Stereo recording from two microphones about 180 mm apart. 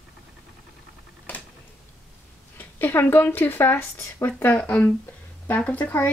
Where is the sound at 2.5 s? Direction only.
10° left (ahead or behind).